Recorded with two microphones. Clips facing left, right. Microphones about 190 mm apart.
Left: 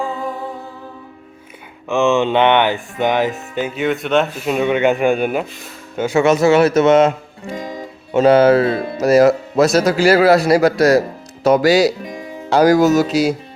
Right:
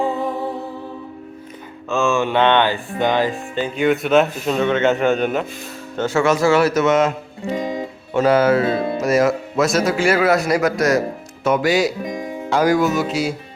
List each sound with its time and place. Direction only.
1.9 s a man's voice: 20° left (ahead or behind)
3.8 s speech: centre (ahead or behind)
4.5 s a man's voice: 15° left (ahead or behind); by 7.1 s 30° left (ahead or behind)
7.5 s music: 20° right (ahead or behind)
8.1 s speech: 25° left (ahead or behind)